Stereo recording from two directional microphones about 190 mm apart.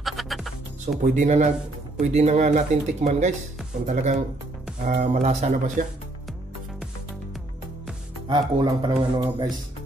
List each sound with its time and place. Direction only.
0.0 s music: centre (ahead or behind)
1.0 s speech: 40° right (ahead or behind)
8.5 s speech: 25° right (ahead or behind)